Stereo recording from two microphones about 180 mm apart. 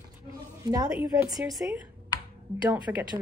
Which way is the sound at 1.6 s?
10° right (ahead or behind).